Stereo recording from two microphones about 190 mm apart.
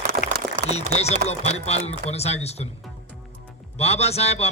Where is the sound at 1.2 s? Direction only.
35° left (ahead or behind).